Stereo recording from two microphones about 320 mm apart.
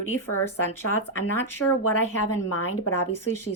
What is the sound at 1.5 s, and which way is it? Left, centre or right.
Speech, left.